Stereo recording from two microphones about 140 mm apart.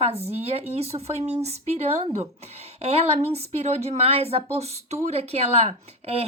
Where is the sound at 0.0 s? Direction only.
50° right (ahead or behind).